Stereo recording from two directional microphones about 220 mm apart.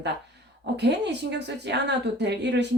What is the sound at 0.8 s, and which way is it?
Speech, 50° right (ahead or behind).